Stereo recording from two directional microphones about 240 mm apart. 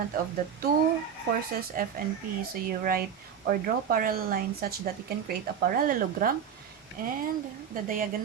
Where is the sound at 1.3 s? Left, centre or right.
Right.